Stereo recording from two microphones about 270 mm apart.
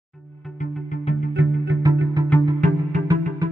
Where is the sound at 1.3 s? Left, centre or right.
Right.